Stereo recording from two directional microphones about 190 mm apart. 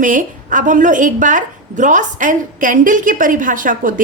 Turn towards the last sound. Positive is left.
turn(degrees=-45)  # may be behind; listen again after turning